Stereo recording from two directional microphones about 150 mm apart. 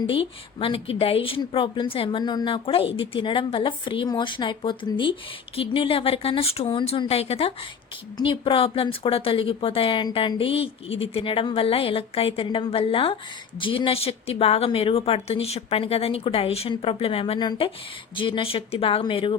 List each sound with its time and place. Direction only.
0.1 s a woman's voice: 35° left (ahead or behind)